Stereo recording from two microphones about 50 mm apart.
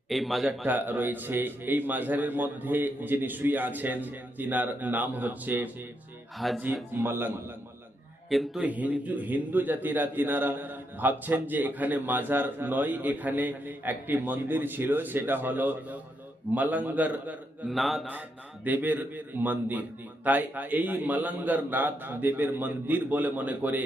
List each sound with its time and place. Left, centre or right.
0.1 s speech: centre
0.4 s a man's voice: right
0.8 s a man's voice: right
6.4 s speech: centre
7.0 s a man's voice: right
8.3 s speech: centre
8.6 s a man's voice: right
17.7 s speech: centre
18.1 s a man's voice: right